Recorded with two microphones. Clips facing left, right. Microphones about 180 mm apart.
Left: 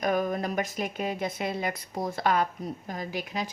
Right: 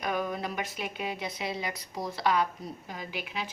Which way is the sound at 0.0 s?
45° left (ahead or behind).